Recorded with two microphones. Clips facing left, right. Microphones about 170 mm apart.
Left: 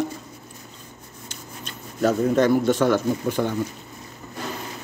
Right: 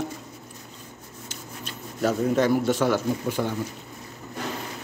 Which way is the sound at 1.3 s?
5° right (ahead or behind).